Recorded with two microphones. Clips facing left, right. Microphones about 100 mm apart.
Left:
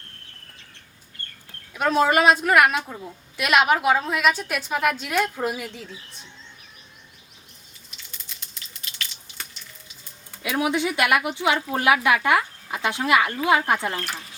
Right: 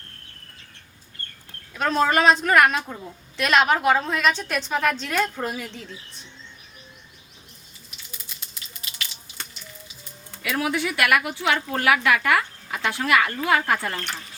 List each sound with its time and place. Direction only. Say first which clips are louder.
1.7 s a woman's voice: left 1 dB; 10° left (ahead or behind)
7.9 s a sound: right 1 dB; 5° right (ahead or behind)
10.4 s speech: left 2 dB; 20° left (ahead or behind)
13.9 s speech: left 1 dB; 5° left (ahead or behind)